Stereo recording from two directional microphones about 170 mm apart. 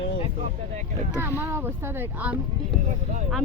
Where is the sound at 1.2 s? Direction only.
15° right (ahead or behind).